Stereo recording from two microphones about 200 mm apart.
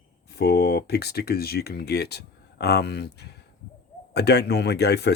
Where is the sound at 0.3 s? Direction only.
50° left (ahead or behind).